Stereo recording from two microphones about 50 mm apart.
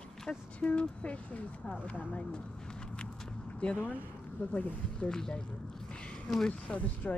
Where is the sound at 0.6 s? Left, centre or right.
Left.